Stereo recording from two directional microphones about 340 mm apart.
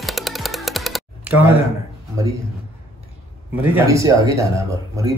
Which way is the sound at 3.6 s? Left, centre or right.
Centre.